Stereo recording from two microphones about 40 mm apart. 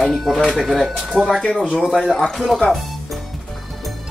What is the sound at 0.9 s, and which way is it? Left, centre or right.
Speech, centre.